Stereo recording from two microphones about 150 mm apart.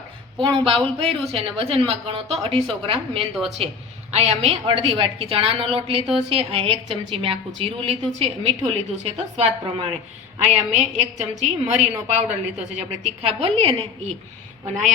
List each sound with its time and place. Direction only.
0.4 s a woman's voice: 35° right (ahead or behind)
3.3 s a woman's voice: centre (ahead or behind)
4.1 s a woman's voice: 45° right (ahead or behind)